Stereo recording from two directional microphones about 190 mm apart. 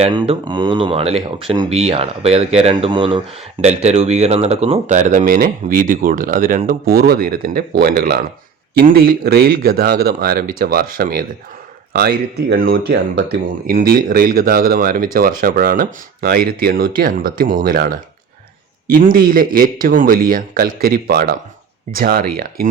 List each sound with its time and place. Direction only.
0.0 s speech: 25° right (ahead or behind); by 17.9 s 50° right (ahead or behind)
18.9 s speech: 50° right (ahead or behind)